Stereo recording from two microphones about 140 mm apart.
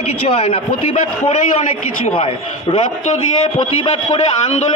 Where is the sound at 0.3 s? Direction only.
40° left (ahead or behind).